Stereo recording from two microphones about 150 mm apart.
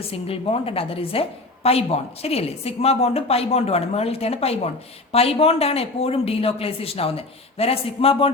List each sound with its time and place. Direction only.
0.1 s speech: 40° left (ahead or behind)